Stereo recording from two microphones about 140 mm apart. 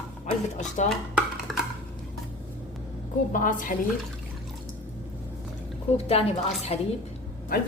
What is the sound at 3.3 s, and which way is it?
Speech, 70° left (ahead or behind).